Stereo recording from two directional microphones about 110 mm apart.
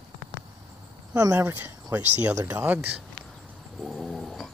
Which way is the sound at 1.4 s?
25° right (ahead or behind).